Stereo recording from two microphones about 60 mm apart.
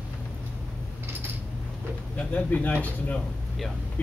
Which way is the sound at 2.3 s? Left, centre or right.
Left.